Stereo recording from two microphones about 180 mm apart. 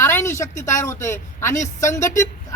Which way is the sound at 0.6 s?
15° left (ahead or behind).